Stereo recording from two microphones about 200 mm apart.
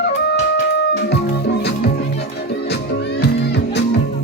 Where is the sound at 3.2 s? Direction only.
60° left (ahead or behind).